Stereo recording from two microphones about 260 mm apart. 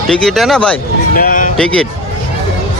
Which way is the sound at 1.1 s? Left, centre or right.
Left.